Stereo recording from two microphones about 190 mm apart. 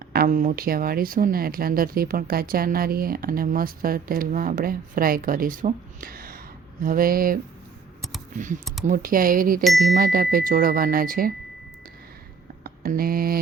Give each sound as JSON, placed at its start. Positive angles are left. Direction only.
{"t": 0.1, "sound": "speech", "side_deg": -50}
{"t": 8.9, "sound": "speech", "side_deg": -45}
{"t": 9.6, "sound": "speech", "side_deg": 0}
{"t": 9.9, "sound": "speech", "side_deg": -50}
{"t": 12.6, "sound": "a sound", "side_deg": -50}